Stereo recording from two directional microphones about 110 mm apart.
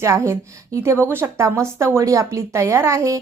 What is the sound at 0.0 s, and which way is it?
A woman's voice, 25° right (ahead or behind).